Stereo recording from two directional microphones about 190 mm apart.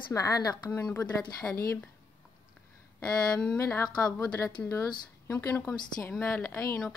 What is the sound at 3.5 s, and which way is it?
A woman's voice, 10° left (ahead or behind).